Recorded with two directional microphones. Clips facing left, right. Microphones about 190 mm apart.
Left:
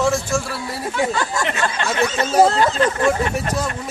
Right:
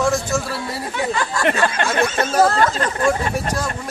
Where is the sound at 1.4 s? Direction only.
55° right (ahead or behind).